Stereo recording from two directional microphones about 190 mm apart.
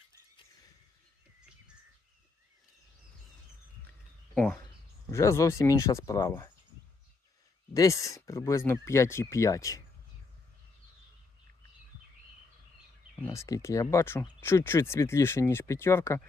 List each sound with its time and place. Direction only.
4.4 s speech: 10° left (ahead or behind)
7.7 s speech: 15° left (ahead or behind)
13.1 s speech: 15° left (ahead or behind)